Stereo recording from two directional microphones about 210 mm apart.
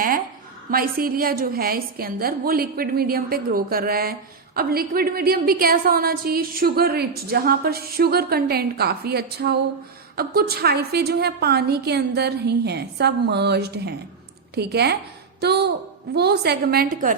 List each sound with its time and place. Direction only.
0.7 s a woman's voice: 45° right (ahead or behind)